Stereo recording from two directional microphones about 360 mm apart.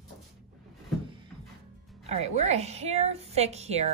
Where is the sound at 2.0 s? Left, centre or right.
Centre.